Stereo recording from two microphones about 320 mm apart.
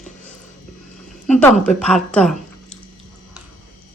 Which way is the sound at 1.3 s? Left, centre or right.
Centre.